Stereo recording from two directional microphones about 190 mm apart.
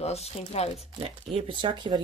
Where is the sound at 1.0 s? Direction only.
30° right (ahead or behind).